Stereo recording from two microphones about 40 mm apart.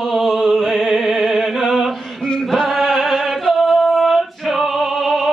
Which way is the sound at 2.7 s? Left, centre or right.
Centre.